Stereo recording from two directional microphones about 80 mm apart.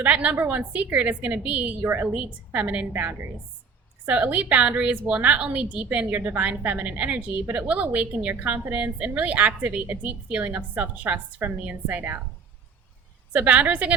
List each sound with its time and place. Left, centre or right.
0.0 s a woman's voice: centre
13.3 s a woman's voice: centre